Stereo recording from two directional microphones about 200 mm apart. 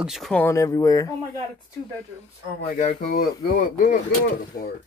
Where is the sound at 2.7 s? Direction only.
40° left (ahead or behind).